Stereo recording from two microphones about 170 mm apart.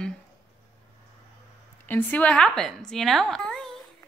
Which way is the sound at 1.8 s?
10° left (ahead or behind).